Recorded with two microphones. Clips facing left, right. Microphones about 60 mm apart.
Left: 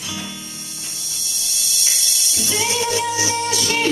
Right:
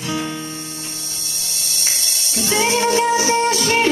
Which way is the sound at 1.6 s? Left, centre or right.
Right.